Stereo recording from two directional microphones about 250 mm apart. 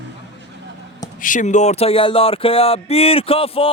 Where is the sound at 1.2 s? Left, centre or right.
Left.